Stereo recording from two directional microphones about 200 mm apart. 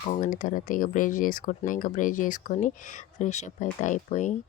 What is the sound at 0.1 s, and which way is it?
Speech, 40° left (ahead or behind).